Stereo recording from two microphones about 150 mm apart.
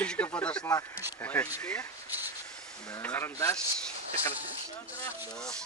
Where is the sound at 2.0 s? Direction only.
15° right (ahead or behind).